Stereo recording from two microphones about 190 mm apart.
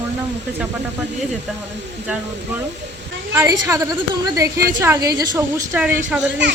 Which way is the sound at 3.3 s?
10° right (ahead or behind).